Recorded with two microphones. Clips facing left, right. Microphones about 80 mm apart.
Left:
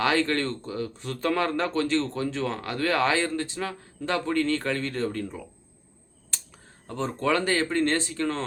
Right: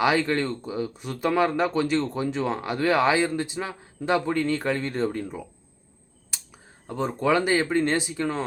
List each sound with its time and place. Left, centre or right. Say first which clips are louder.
0.0 s speech: right 2 dB; centre